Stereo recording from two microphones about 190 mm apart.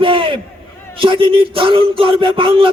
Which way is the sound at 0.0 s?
25° right (ahead or behind).